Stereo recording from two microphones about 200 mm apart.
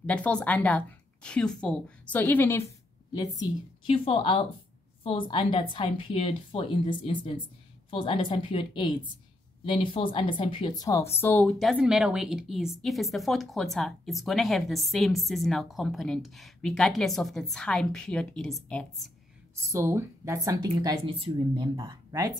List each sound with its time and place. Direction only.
0.0 s a woman's voice: 5° left (ahead or behind)
19.7 s speech: 10° right (ahead or behind)